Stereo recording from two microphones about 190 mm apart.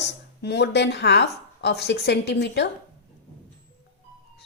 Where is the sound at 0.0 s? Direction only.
65° left (ahead or behind).